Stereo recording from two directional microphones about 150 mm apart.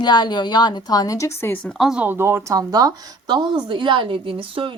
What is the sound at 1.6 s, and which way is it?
A woman's voice, centre (ahead or behind).